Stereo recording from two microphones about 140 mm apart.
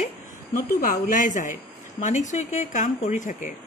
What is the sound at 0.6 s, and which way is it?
Speech, 85° left.